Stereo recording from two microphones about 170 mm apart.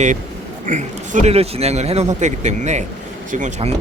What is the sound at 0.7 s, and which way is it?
A man's voice, 45° right (ahead or behind).